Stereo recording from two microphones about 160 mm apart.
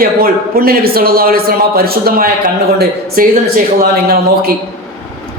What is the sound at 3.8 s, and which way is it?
Speech, 75° right (ahead or behind).